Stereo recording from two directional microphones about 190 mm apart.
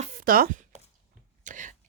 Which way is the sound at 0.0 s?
45° right (ahead or behind).